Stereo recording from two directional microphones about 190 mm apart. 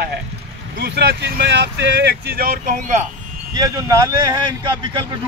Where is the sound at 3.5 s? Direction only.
20° right (ahead or behind).